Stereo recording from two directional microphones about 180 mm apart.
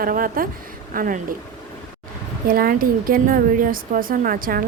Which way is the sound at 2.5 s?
50° right (ahead or behind).